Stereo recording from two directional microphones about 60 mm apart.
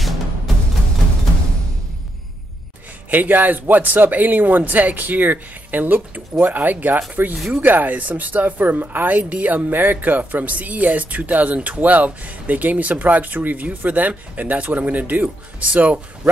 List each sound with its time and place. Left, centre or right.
3.1 s speech: right
7.3 s speech: centre
7.6 s speech: right